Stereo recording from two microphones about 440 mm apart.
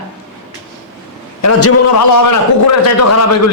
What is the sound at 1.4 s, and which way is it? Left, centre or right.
A man's voice, left.